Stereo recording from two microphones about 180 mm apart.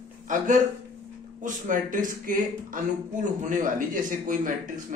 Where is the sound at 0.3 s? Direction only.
45° right (ahead or behind).